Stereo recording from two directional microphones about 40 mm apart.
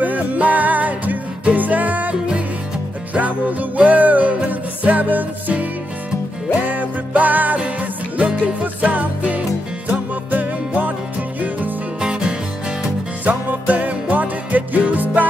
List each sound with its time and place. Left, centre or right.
0.0 s music: right
3.2 s music: right
12.0 s music: right
13.2 s music: right